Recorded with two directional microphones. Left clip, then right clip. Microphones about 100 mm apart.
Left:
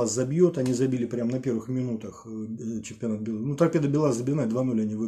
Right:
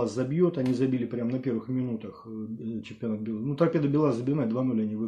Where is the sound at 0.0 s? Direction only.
20° left (ahead or behind).